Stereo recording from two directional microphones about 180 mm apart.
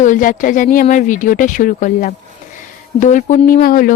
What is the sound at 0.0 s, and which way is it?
Speech, 50° left (ahead or behind).